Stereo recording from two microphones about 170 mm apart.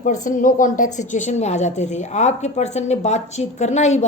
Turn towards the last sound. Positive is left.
turn(degrees=40)  # may be behind; listen again after turning